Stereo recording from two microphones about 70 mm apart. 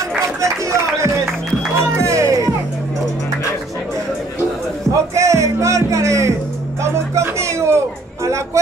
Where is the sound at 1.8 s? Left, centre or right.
Right.